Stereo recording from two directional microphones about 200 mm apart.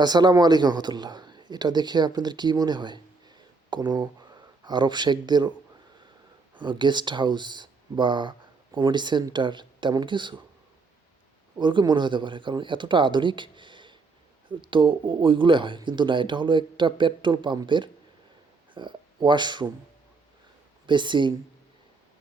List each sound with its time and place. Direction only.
0.0 s a man's voice: 20° right (ahead or behind)
6.6 s speech: 25° right (ahead or behind)
11.5 s speech: 25° right (ahead or behind)
20.8 s speech: 25° right (ahead or behind)